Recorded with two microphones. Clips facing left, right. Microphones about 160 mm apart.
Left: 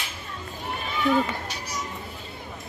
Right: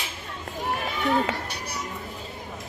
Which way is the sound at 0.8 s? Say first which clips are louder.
Left 2 dB; 80° right.